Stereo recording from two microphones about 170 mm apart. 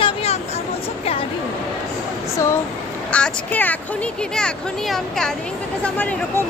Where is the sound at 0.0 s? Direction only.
35° left (ahead or behind).